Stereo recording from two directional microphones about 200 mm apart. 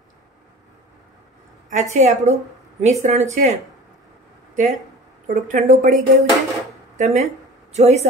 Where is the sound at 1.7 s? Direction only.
35° right (ahead or behind).